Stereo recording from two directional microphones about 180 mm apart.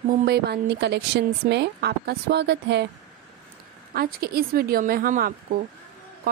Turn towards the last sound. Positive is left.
turn(degrees=-50)  # may be behind; listen again after turning